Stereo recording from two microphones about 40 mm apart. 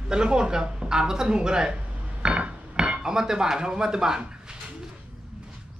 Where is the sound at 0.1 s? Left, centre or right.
Right.